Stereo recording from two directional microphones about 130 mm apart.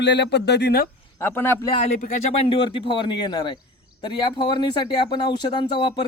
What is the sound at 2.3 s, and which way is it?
Speech, 45° left (ahead or behind).